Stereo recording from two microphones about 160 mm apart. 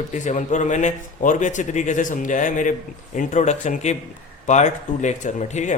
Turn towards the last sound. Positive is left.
turn(degrees=50)  # may be behind; listen again after turning